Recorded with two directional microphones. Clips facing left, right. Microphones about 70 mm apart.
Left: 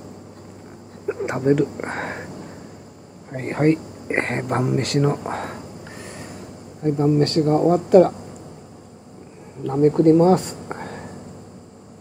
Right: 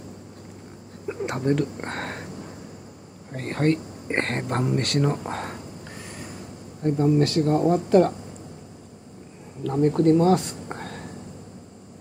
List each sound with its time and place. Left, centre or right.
1.0 s speech: centre
3.3 s speech: centre
5.3 s snort: centre
6.8 s speech: centre
9.6 s speech: left
10.7 s whispering: centre